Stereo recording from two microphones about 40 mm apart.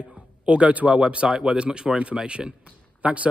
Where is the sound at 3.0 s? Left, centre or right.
Right.